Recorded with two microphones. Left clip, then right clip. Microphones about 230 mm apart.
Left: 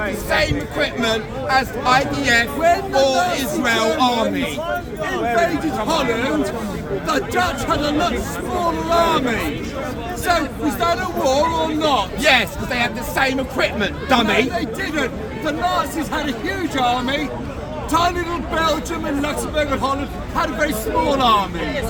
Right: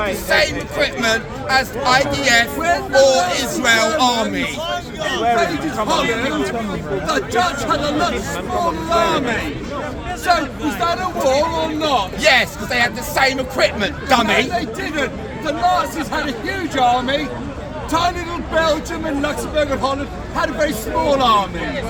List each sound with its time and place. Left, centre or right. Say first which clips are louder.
0.3 s a man's voice: right 3 dB; centre
5.9 s a man's voice: right 1 dB; centre
12.2 s speech: right 2 dB; centre
14.3 s speech: right 1 dB; centre